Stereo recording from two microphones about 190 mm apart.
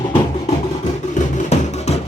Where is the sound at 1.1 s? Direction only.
35° left (ahead or behind).